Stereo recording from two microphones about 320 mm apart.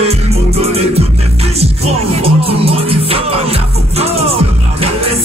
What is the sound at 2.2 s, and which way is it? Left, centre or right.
Music, centre.